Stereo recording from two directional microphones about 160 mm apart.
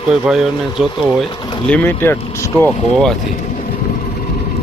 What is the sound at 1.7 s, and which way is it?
Speech, 10° left (ahead or behind).